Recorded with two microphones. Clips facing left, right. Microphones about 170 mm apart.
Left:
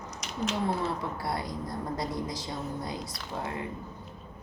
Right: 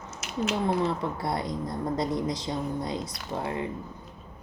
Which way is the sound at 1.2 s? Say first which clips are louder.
Right 3 dB; 20° right (ahead or behind).